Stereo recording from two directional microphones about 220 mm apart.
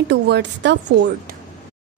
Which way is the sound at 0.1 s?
50° right (ahead or behind).